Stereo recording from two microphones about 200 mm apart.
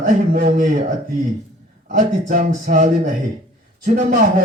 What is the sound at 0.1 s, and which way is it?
Speech, 40° right (ahead or behind).